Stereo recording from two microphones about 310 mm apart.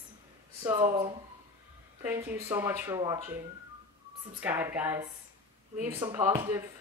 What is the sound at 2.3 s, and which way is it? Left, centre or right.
Speech, centre.